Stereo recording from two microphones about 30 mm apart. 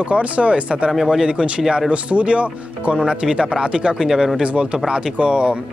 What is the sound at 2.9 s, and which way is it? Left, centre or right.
Speech, right.